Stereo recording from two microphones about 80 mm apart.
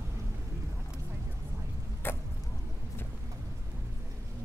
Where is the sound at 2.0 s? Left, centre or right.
Left.